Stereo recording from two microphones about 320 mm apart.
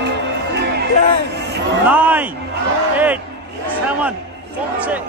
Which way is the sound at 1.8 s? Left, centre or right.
Centre.